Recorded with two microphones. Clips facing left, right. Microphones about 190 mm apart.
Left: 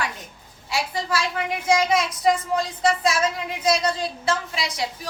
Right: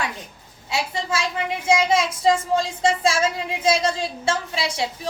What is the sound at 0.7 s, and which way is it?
Speech, 25° right (ahead or behind).